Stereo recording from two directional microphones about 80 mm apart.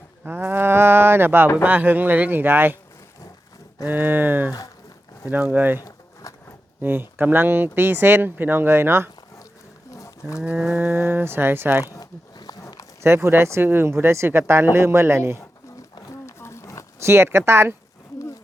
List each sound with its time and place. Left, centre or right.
0.3 s livestock: right
1.6 s speech: right
3.8 s speech: right
6.8 s speech: right
9.9 s wild animals: left
10.4 s a sound: centre
10.8 s speech: right
11.9 s a sound: left
13.0 s speech: right
16.2 s roaring cats: left
17.0 s speech: right